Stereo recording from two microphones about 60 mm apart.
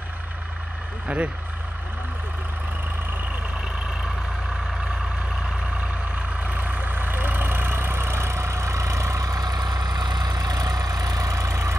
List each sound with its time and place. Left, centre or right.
1.0 s speech: right
6.1 s vehicle: right